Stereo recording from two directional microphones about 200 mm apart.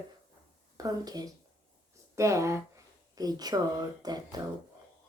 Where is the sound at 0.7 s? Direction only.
20° right (ahead or behind).